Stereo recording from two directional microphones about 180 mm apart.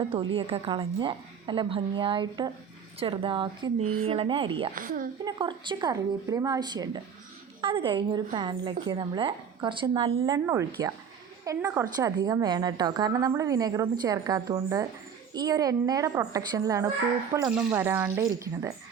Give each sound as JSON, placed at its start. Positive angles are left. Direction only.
{"t": 0.1, "sound": "a woman's voice", "side_deg": -30}
{"t": 4.7, "sound": "a woman's voice", "side_deg": -50}
{"t": 5.2, "sound": "a woman's voice", "side_deg": -25}
{"t": 17.5, "sound": "speech", "side_deg": -10}